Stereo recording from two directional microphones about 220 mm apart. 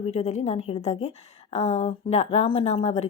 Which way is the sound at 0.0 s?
30° left (ahead or behind).